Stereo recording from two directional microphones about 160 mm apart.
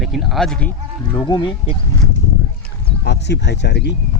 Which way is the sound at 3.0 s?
90° left.